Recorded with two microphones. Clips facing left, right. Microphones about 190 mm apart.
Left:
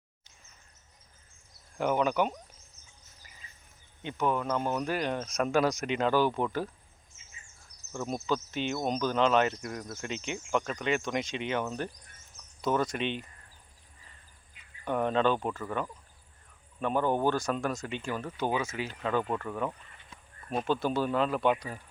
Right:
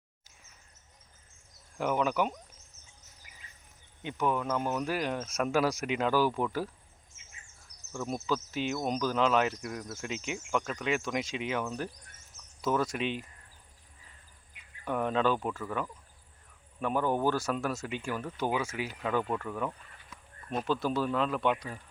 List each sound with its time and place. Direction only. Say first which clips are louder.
1.8 s speech: left 2 dB; centre (ahead or behind)
4.0 s speech: left 1 dB; 10° right (ahead or behind)
8.1 s speech: left 1 dB; 5° right (ahead or behind)
12.6 s speech: left 1 dB; centre (ahead or behind)
14.8 s speech: left 2 dB; 5° right (ahead or behind)
16.8 s speech: left 1 dB; 5° right (ahead or behind)
19.2 s speech: left 1 dB; 5° left (ahead or behind)
20.1 s a sound: right 1 dB; 30° left (ahead or behind)
20.5 s speech: left 1 dB; centre (ahead or behind)